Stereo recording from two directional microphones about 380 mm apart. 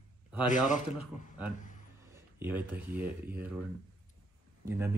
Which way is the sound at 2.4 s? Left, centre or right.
Centre.